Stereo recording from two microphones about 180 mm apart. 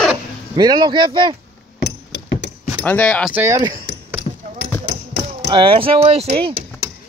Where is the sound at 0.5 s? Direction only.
25° right (ahead or behind).